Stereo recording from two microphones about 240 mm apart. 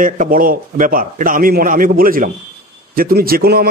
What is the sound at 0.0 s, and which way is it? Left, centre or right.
A man's voice, right.